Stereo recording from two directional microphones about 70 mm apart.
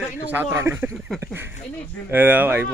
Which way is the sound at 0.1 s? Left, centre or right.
Right.